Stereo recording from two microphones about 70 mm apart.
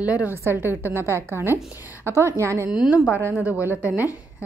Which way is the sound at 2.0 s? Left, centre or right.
Right.